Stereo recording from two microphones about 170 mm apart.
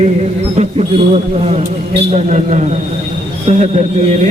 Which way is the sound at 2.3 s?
45° right (ahead or behind).